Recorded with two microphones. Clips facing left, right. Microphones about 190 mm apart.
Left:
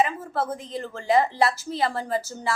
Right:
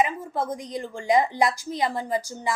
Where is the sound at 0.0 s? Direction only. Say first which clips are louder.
Even; 15° right (ahead or behind).